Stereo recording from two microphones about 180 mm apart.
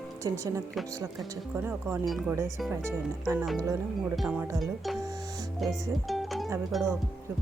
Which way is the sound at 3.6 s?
15° right (ahead or behind).